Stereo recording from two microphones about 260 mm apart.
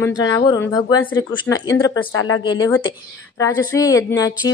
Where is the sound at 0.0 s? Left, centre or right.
Centre.